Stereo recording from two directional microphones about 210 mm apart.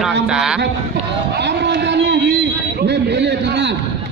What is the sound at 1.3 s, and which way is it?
A man's voice, 55° right (ahead or behind).